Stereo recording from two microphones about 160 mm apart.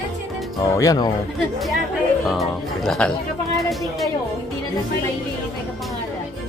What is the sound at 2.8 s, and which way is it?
Speech, 5° left (ahead or behind).